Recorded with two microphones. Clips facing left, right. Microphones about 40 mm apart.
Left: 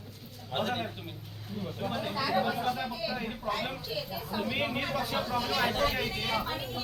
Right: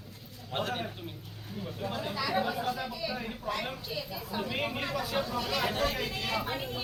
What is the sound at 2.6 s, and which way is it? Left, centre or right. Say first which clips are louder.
A woman's voice: left 2 dB; centre.